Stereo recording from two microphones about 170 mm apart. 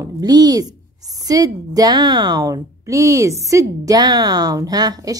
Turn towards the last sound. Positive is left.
turn(degrees=-25)  # may be behind; listen again after turning